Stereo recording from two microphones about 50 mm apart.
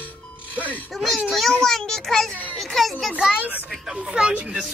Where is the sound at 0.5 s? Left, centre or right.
Right.